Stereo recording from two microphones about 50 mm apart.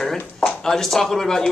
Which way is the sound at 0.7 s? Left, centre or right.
Centre.